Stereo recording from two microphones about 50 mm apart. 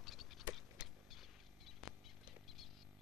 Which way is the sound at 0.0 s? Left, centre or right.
Centre.